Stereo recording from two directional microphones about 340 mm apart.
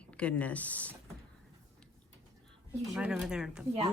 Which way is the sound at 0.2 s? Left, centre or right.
Centre.